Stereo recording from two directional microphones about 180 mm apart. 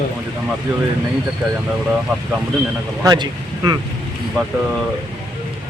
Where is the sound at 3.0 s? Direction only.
25° right (ahead or behind).